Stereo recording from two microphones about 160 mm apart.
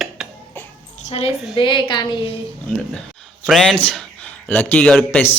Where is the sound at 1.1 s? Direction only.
40° left (ahead or behind).